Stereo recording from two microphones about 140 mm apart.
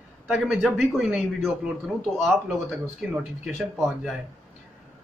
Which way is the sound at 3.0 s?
5° right (ahead or behind).